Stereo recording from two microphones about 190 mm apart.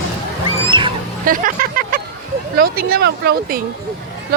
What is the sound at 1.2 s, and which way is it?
Vehicle, 45° right (ahead or behind).